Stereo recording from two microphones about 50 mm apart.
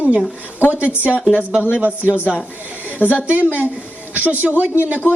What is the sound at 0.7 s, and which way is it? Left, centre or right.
A woman's voice, right.